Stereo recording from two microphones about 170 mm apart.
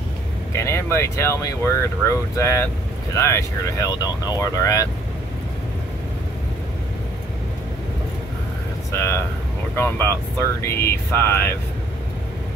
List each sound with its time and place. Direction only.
0.5 s speech: 15° left (ahead or behind)
8.9 s speech: 15° left (ahead or behind)